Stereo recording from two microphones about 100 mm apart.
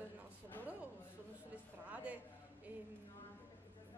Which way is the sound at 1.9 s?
15° right (ahead or behind).